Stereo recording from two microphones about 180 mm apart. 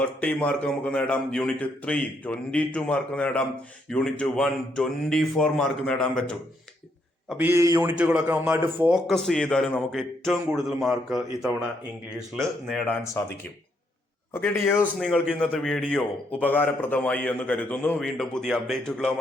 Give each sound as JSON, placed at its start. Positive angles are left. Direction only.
{"t": 0.0, "sound": "a man's voice", "side_deg": 5}
{"t": 7.3, "sound": "a man's voice", "side_deg": -10}
{"t": 9.0, "sound": "a man's voice", "side_deg": 0}
{"t": 14.6, "sound": "a man's voice", "side_deg": 10}